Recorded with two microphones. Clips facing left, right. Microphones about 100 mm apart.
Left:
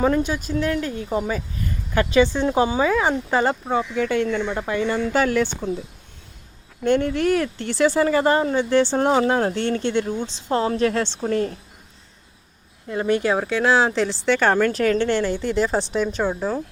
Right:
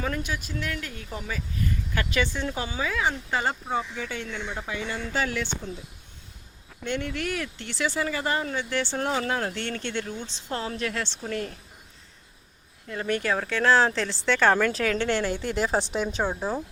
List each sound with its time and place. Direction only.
0.0 s speech: 30° left (ahead or behind)
1.6 s a sound: 35° left (ahead or behind)
2.0 s speech: 30° left (ahead or behind)
2.9 s speech: 45° left (ahead or behind)
3.5 s speech: 90° left; by 5.7 s 50° left (ahead or behind)
6.8 s speech: 40° left (ahead or behind); by 10.1 s 25° left (ahead or behind)
10.5 s speech: 35° left (ahead or behind)
12.9 s speech: 20° left (ahead or behind); by 16.6 s 10° right (ahead or behind)